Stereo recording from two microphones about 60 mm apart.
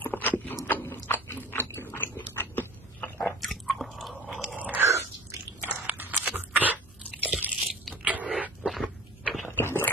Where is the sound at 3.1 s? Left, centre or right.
Centre.